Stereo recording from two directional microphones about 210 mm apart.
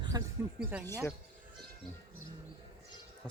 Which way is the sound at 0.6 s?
10° right (ahead or behind).